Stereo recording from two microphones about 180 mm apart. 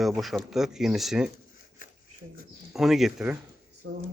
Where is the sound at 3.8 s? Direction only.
90° right.